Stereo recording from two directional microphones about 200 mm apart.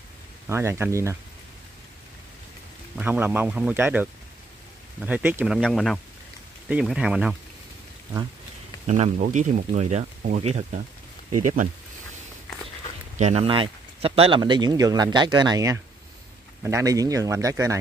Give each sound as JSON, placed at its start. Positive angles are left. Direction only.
{"t": 0.5, "sound": "speech", "side_deg": -15}
{"t": 3.0, "sound": "speech", "side_deg": -10}
{"t": 8.8, "sound": "speech", "side_deg": -35}
{"t": 13.1, "sound": "speech", "side_deg": -35}